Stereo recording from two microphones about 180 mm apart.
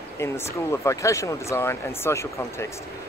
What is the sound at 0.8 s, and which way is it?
Speech, 15° left (ahead or behind).